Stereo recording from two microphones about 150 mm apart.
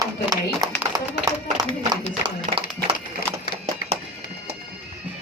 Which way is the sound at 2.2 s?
35° right (ahead or behind).